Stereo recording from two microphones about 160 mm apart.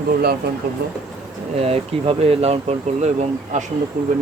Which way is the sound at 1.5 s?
35° right (ahead or behind).